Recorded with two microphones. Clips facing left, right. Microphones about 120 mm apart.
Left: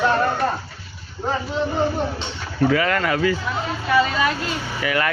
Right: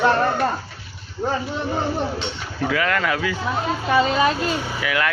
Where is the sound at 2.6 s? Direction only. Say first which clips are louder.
Left 2 dB; centre (ahead or behind).